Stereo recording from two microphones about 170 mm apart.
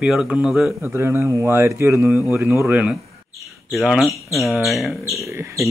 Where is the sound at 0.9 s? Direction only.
15° right (ahead or behind).